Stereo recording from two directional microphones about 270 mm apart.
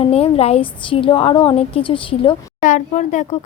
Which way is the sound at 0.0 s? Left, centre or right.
Left.